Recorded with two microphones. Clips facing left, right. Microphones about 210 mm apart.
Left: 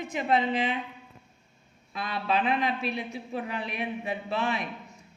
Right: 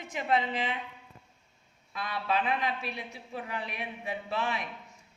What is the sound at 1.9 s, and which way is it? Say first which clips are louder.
A woman's voice: left 3 dB; 25° left (ahead or behind).